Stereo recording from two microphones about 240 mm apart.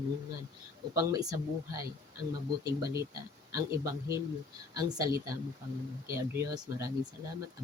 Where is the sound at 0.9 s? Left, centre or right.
Centre.